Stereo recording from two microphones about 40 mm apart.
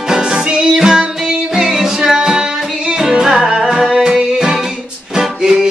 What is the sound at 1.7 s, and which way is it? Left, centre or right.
Music, centre.